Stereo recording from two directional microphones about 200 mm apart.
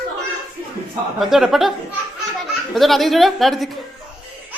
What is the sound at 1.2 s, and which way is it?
Mantra, centre (ahead or behind).